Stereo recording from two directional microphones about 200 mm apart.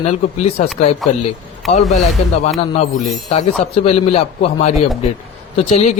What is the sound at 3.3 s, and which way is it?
A man's voice, 30° left (ahead or behind).